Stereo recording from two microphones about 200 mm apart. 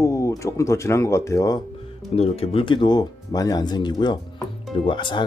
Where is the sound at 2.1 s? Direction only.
30° left (ahead or behind).